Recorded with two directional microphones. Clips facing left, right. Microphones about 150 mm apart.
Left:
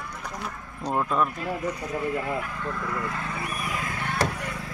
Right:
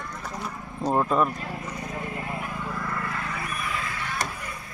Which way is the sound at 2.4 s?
20° right (ahead or behind).